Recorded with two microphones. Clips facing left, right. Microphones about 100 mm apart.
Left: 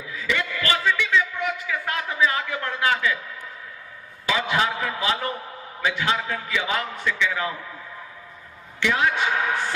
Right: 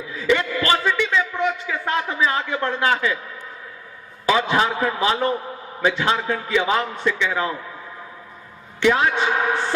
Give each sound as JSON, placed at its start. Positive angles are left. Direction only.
{"t": 0.1, "sound": "a sound", "side_deg": -35}
{"t": 4.3, "sound": "a man's voice", "side_deg": -35}
{"t": 8.8, "sound": "a man's voice", "side_deg": -35}